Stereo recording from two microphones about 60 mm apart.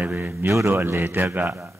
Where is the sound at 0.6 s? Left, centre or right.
Right.